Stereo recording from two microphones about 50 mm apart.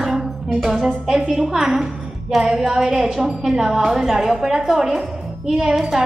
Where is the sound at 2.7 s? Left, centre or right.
Right.